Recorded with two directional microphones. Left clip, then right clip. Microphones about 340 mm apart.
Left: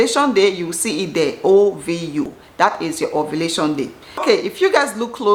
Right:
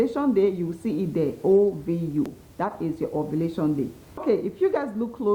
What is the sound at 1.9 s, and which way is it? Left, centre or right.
A woman's voice, centre.